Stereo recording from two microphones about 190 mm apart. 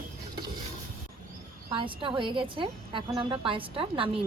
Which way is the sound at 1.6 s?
25° right (ahead or behind).